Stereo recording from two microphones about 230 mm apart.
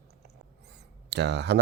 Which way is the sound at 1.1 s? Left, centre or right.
Right.